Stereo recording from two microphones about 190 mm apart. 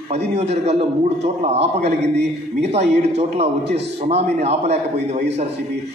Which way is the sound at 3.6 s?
65° right (ahead or behind).